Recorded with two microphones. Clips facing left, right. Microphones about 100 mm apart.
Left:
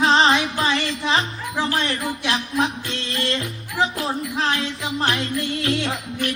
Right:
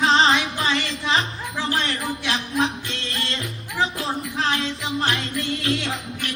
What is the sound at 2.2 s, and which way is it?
Music, 30° left (ahead or behind).